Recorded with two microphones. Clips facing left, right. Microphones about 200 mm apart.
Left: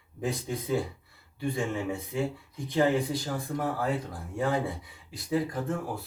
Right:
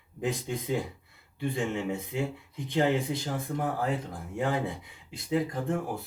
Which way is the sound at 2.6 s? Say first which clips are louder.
Left 1 dB; 20° right (ahead or behind).